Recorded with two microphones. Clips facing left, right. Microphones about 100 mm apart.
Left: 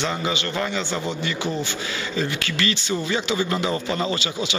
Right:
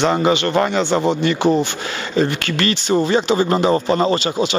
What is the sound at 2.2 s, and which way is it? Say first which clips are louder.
A man's voice: right 8 dB; 50° right (ahead or behind).